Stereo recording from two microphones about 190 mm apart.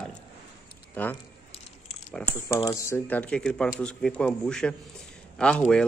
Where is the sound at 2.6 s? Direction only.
15° left (ahead or behind).